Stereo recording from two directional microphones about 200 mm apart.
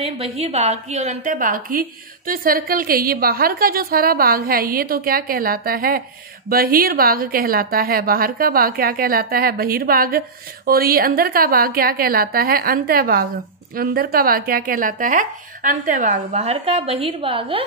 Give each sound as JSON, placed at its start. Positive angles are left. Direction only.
{"t": 0.0, "sound": "a woman's voice", "side_deg": -30}
{"t": 16.3, "sound": "a woman's voice", "side_deg": -30}